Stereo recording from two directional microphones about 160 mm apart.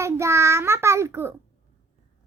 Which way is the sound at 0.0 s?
15° right (ahead or behind).